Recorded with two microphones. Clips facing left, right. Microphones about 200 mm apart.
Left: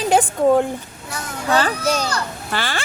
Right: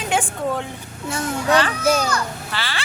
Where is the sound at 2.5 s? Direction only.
50° left (ahead or behind).